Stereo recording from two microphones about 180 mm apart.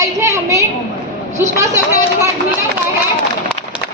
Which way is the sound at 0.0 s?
15° right (ahead or behind).